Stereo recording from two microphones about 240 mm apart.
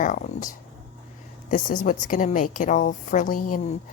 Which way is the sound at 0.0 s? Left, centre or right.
Left.